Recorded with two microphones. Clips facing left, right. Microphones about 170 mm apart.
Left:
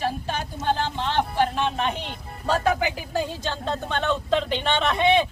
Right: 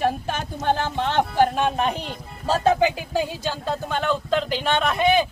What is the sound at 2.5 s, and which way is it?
Speech, 25° right (ahead or behind).